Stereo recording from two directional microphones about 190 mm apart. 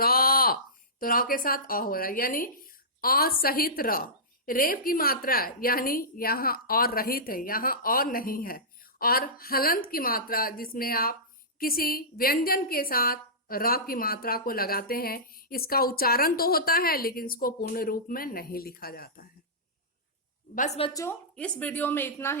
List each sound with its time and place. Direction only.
0.0 s a woman's voice: 50° left (ahead or behind)
20.6 s a woman's voice: 35° left (ahead or behind)
20.9 s a woman's voice: 15° left (ahead or behind)